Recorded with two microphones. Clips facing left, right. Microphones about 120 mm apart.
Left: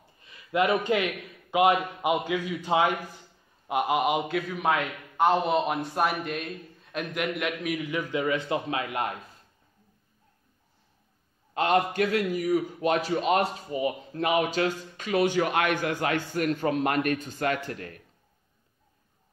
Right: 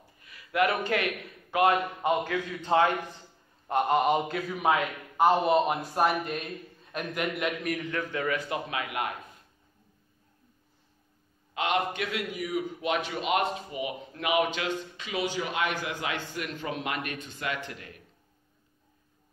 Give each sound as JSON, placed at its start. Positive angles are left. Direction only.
{"t": 0.2, "sound": "a man's voice", "side_deg": 25}
{"t": 11.5, "sound": "a man's voice", "side_deg": 40}